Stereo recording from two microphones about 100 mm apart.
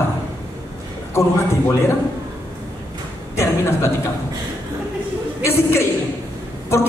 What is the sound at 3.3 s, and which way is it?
Speech, 30° left (ahead or behind).